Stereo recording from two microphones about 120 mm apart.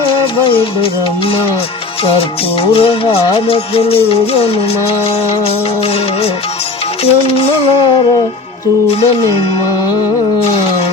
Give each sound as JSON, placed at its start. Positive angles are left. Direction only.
{"t": 0.1, "sound": "music", "side_deg": 45}
{"t": 8.9, "sound": "music", "side_deg": 55}